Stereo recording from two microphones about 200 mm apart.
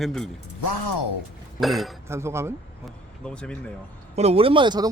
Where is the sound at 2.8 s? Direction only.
5° left (ahead or behind).